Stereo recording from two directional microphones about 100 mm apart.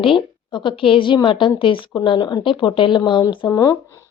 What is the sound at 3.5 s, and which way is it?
Speech, 40° left (ahead or behind).